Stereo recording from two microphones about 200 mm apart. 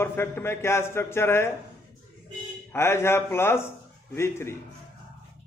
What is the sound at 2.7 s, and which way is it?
A man's voice, 15° left (ahead or behind).